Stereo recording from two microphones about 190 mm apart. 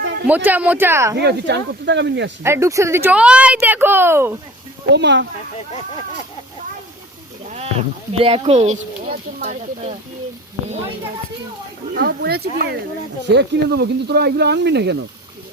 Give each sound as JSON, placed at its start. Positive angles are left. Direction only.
{"t": 0.0, "sound": "a sound", "side_deg": -65}
{"t": 0.3, "sound": "speech", "side_deg": -10}
{"t": 1.1, "sound": "speech", "side_deg": -60}
{"t": 2.4, "sound": "speech", "side_deg": -15}
{"t": 4.9, "sound": "speech", "side_deg": -65}
{"t": 7.4, "sound": "a sound", "side_deg": -35}
{"t": 8.2, "sound": "speech", "side_deg": -30}
{"t": 11.9, "sound": "speech", "side_deg": -55}